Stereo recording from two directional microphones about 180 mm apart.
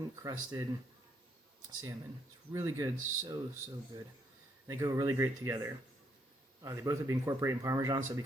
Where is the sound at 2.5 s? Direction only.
20° right (ahead or behind).